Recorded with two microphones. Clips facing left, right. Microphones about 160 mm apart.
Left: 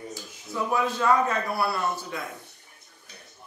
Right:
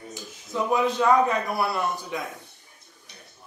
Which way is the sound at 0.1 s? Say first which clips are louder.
Right 2 dB; 20° right (ahead or behind).